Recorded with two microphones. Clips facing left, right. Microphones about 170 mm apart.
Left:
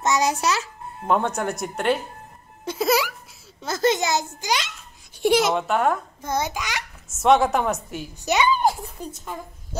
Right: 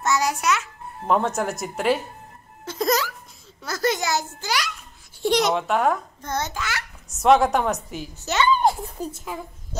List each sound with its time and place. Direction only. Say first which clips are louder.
0.0 s a child's voice: left 1 dB; 20° left (ahead or behind)
1.0 s a child's voice: even; centre (ahead or behind)
2.8 s a sound: left 1 dB; 10° left (ahead or behind)
3.6 s a child's voice: left 3 dB; 20° left (ahead or behind)
5.3 s a child's voice: even; centre (ahead or behind)
7.1 s a child's voice: right 1 dB; centre (ahead or behind)
8.2 s speech: left 2 dB; 15° left (ahead or behind)
9.0 s a child's voice: right 4 dB; 5° right (ahead or behind)